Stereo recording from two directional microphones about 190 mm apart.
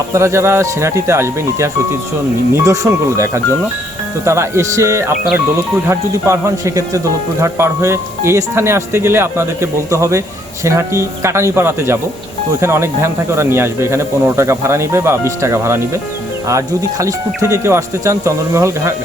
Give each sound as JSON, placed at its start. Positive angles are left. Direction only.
{"t": 0.1, "sound": "speech", "side_deg": -15}